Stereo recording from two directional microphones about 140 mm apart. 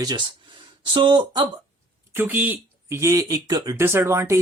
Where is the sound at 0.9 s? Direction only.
35° right (ahead or behind).